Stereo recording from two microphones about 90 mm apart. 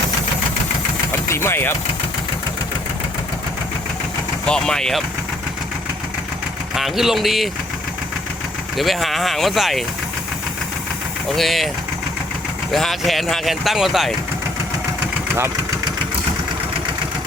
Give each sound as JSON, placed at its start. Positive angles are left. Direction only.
{"t": 1.3, "sound": "speech", "side_deg": 30}
{"t": 4.4, "sound": "speech", "side_deg": 10}
{"t": 6.7, "sound": "speech", "side_deg": -5}
{"t": 8.8, "sound": "speech", "side_deg": 0}
{"t": 11.3, "sound": "speech", "side_deg": 0}
{"t": 12.7, "sound": "speech", "side_deg": 0}